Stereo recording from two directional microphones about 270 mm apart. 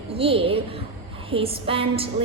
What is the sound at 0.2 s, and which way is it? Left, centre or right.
A woman's voice, centre.